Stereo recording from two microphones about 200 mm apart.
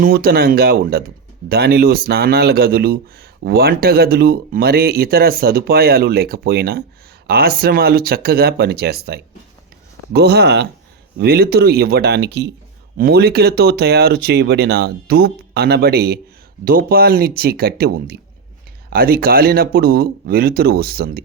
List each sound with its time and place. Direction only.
0.0 s speech: 50° right (ahead or behind)